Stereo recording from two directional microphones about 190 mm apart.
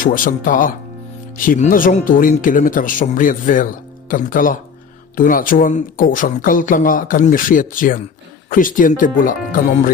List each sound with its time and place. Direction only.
0.0 s speech: 45° left (ahead or behind)